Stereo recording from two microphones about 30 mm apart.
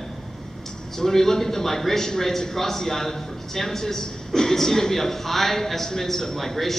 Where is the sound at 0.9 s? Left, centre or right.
Centre.